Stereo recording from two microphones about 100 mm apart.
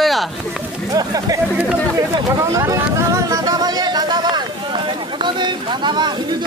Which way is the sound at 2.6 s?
30° right (ahead or behind).